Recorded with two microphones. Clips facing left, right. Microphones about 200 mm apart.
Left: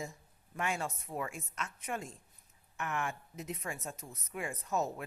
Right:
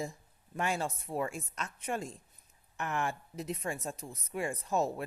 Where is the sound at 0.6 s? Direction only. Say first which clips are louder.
Right 3 dB; 35° right (ahead or behind).